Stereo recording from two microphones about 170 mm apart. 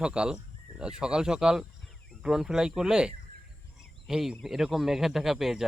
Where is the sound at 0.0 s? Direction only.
5° right (ahead or behind).